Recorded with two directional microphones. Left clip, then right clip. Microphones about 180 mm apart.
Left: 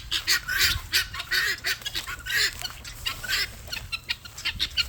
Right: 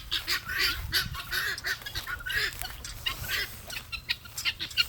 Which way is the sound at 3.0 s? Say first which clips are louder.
Left 4 dB; 90° left.